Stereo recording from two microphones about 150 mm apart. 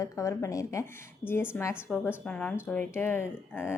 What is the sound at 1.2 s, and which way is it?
Speech, 40° left (ahead or behind).